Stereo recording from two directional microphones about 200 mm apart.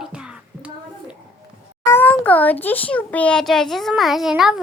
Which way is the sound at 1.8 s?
10° left (ahead or behind).